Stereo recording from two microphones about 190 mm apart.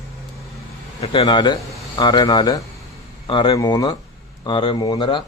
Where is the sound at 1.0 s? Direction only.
25° left (ahead or behind).